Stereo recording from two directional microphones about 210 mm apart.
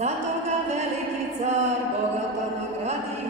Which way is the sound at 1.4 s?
30° right (ahead or behind).